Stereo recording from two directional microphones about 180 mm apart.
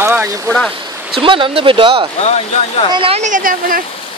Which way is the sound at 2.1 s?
35° left (ahead or behind).